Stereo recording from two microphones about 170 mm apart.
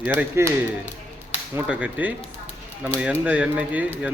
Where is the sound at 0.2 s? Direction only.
15° right (ahead or behind).